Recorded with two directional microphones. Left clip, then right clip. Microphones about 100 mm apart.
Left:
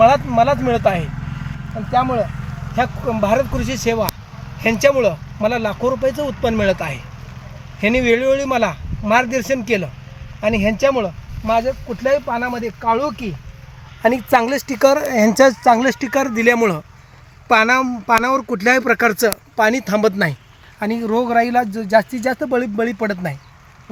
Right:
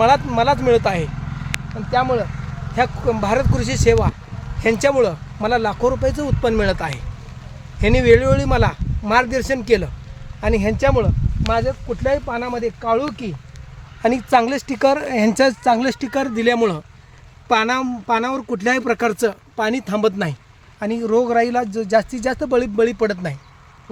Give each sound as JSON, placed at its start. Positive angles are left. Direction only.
{"t": 0.0, "sound": "speech", "side_deg": -50}
{"t": 1.2, "sound": "vehicle", "side_deg": 0}
{"t": 3.2, "sound": "speech", "side_deg": -40}
{"t": 11.6, "sound": "speech", "side_deg": 0}
{"t": 12.5, "sound": "speech", "side_deg": 15}
{"t": 14.0, "sound": "speech", "side_deg": 5}
{"t": 17.9, "sound": "speech", "side_deg": 30}
{"t": 19.2, "sound": "speech", "side_deg": 30}
{"t": 20.7, "sound": "speech", "side_deg": 10}
{"t": 22.4, "sound": "speech", "side_deg": -15}